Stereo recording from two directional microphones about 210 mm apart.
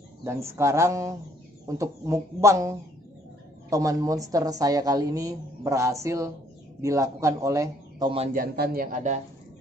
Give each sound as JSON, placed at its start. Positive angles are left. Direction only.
{"t": 0.2, "sound": "a woman's voice", "side_deg": -10}
{"t": 8.1, "sound": "a man's voice", "side_deg": -30}
{"t": 8.4, "sound": "speech", "side_deg": -45}